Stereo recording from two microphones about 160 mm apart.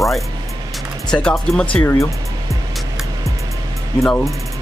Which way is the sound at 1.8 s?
15° left (ahead or behind).